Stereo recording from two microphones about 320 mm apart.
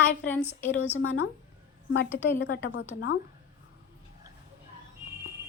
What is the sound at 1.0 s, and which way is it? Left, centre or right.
A woman's voice, left.